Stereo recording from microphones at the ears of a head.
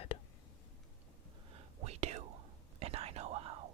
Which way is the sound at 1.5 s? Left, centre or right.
Right.